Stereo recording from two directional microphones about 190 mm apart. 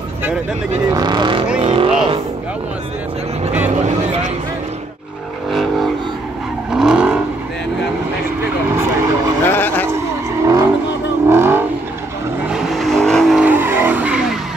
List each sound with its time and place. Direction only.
0.8 s speech: 20° right (ahead or behind)
1.6 s vehicle: 25° right (ahead or behind)
5.5 s vehicle: centre (ahead or behind)
8.7 s vehicle: 15° right (ahead or behind)
9.5 s vehicle: 10° left (ahead or behind)
10.4 s vehicle: 15° right (ahead or behind)
12.4 s vehicle: centre (ahead or behind)